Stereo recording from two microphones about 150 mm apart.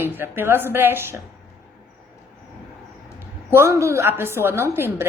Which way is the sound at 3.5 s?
15° right (ahead or behind).